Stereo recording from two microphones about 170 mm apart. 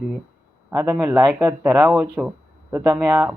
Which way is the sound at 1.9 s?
5° right (ahead or behind).